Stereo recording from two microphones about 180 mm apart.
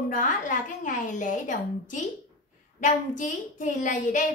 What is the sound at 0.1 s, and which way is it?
A woman's voice, 45° left (ahead or behind).